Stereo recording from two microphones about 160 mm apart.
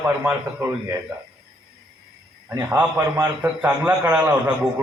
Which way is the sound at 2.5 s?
15° right (ahead or behind).